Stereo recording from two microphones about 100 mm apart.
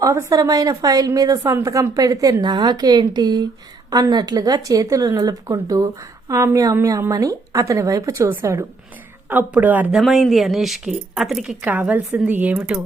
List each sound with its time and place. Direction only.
0.0 s a woman's voice: 35° right (ahead or behind)
9.3 s a woman's voice: 15° right (ahead or behind)
9.9 s speech: centre (ahead or behind)
11.6 s a woman's voice: 15° right (ahead or behind)